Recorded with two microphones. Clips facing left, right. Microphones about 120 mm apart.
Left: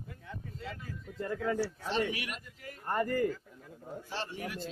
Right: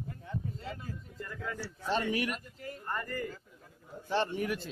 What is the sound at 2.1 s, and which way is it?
Speech, 40° right (ahead or behind).